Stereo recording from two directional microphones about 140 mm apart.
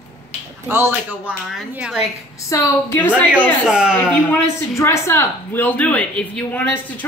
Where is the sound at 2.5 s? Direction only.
15° left (ahead or behind).